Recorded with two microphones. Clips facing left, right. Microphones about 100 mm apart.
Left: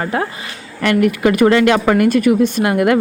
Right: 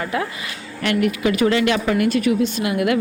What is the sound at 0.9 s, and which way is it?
Speech, 50° left (ahead or behind).